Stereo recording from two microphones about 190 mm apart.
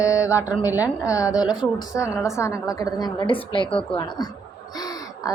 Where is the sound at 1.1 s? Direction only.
15° left (ahead or behind).